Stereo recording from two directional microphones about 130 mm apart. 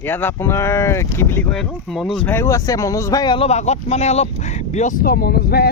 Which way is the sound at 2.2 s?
20° left (ahead or behind).